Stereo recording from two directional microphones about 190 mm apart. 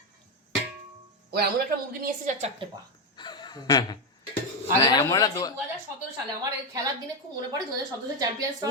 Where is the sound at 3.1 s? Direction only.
25° left (ahead or behind).